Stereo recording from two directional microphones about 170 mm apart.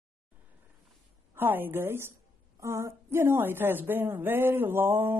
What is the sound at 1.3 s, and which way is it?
Speech, 10° right (ahead or behind).